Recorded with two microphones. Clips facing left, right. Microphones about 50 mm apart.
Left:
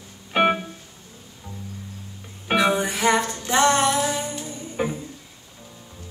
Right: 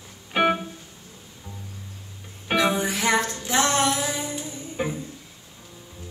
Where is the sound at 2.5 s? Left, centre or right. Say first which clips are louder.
Left 2 dB; centre.